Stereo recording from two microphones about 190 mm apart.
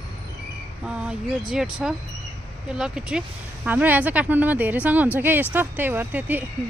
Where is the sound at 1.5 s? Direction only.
5° right (ahead or behind).